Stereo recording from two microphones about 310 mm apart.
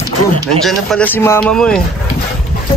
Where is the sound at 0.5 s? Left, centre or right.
Centre.